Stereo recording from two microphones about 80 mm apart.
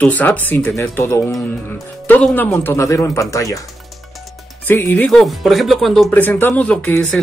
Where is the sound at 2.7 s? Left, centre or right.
Left.